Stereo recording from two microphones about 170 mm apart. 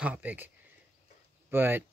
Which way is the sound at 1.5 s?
10° right (ahead or behind).